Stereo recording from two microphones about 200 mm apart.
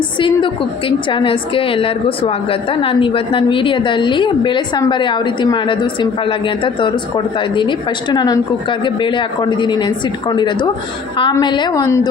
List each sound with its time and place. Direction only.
0.2 s a woman's voice: 25° left (ahead or behind)